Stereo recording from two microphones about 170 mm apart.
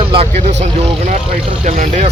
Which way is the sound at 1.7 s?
45° right (ahead or behind).